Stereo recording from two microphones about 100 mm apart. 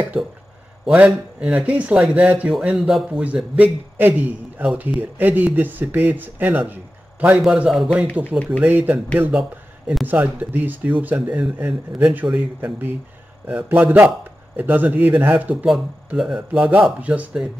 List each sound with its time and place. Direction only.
0.8 s a man's voice: 10° right (ahead or behind)
7.2 s a man's voice: 10° right (ahead or behind)
8.5 s a man's voice: 20° right (ahead or behind)
13.5 s a man's voice: 15° right (ahead or behind)
16.1 s a man's voice: 5° right (ahead or behind)